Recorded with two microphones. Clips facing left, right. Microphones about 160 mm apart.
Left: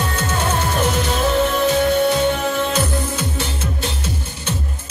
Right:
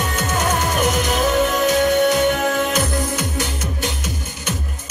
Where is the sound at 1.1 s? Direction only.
15° right (ahead or behind).